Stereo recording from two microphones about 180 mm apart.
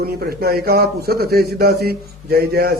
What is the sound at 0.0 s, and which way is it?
A man's voice, 60° right (ahead or behind).